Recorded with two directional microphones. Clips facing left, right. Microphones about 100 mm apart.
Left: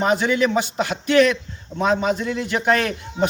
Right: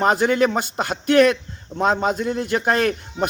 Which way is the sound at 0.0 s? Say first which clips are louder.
Right 2 dB; 50° right (ahead or behind).